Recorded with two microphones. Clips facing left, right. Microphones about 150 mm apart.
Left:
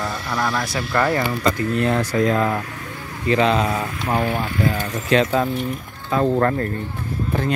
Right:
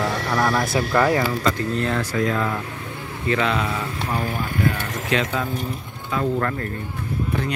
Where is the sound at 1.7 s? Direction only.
20° left (ahead or behind); by 6.7 s 40° left (ahead or behind).